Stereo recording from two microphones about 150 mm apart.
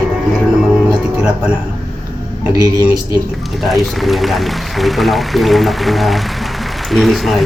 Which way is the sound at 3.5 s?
Centre (ahead or behind).